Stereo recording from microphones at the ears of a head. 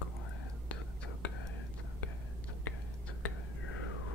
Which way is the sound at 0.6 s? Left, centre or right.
Left.